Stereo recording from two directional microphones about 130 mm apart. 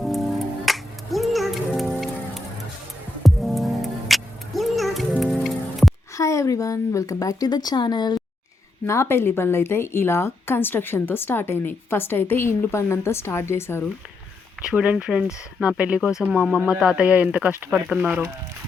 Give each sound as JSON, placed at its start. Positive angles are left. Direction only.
{"t": 0.0, "sound": "music", "side_deg": 0}
{"t": 6.1, "sound": "a woman's voice", "side_deg": 25}
{"t": 8.9, "sound": "a woman's voice", "side_deg": 20}
{"t": 14.6, "sound": "speech", "side_deg": -5}